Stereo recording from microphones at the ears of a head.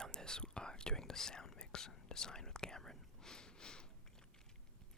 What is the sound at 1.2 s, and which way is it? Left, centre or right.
Whispering, left.